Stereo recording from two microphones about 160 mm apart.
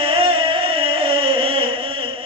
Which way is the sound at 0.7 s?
35° right (ahead or behind).